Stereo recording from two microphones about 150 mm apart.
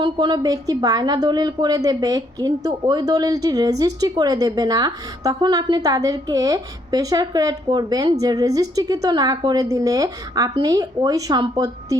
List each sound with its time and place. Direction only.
0.0 s a woman's voice: 30° right (ahead or behind)